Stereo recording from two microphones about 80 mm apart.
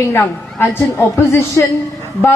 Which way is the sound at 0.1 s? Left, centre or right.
Left.